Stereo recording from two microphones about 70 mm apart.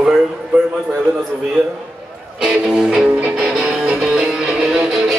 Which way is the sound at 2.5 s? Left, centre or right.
Centre.